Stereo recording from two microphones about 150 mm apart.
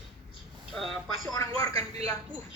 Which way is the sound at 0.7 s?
Centre (ahead or behind).